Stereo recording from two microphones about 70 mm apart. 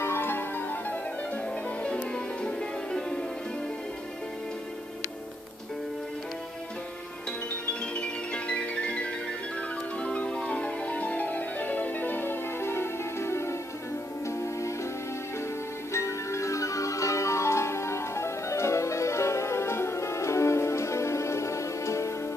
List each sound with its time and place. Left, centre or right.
0.0 s music: left; by 3.3 s centre
7.9 s music: centre; by 14.7 s left
15.9 s music: left